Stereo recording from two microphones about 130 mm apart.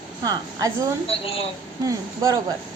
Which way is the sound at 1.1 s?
50° left (ahead or behind).